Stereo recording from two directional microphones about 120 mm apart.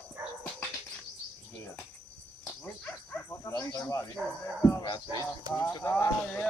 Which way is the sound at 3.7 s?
25° left (ahead or behind).